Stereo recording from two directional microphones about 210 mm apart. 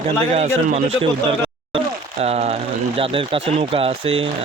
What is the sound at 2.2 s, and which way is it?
Speech, 30° right (ahead or behind).